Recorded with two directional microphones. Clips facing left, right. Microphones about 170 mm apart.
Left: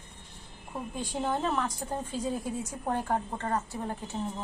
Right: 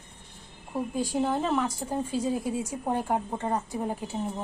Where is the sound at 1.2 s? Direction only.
10° right (ahead or behind).